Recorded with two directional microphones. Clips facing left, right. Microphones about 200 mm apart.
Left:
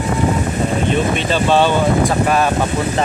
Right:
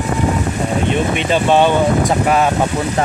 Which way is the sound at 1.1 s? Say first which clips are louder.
Right 1 dB; 15° right (ahead or behind).